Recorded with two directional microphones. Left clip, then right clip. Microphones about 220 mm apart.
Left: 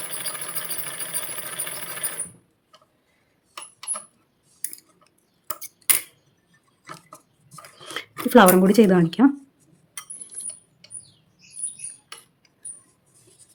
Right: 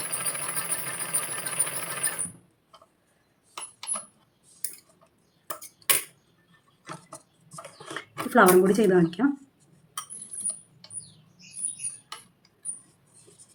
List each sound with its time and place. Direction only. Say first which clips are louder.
7.9 s speech: left 5 dB; 50° left (ahead or behind)